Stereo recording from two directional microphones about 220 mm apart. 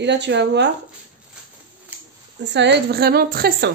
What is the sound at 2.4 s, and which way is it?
Speech, 50° right (ahead or behind).